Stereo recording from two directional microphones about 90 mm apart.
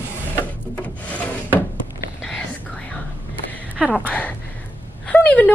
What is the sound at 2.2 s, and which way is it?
Whispering, 15° left (ahead or behind).